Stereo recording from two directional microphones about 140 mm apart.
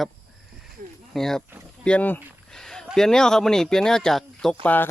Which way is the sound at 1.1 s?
5° left (ahead or behind).